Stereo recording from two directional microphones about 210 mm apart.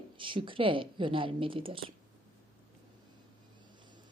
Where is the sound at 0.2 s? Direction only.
25° right (ahead or behind).